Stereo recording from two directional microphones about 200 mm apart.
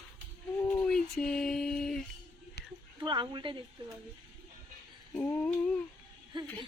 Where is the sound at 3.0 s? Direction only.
20° right (ahead or behind).